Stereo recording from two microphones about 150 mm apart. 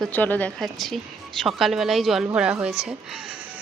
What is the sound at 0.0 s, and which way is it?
Speech, 10° left (ahead or behind).